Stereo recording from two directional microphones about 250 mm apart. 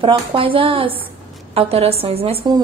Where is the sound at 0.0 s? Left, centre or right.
Right.